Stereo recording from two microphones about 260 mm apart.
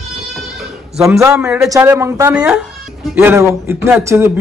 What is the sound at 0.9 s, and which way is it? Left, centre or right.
Speech, centre.